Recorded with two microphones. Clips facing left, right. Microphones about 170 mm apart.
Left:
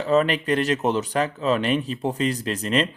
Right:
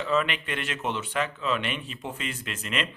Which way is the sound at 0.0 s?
40° left (ahead or behind).